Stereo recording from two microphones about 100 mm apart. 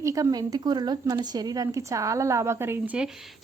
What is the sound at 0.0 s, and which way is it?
Speech, 35° right (ahead or behind).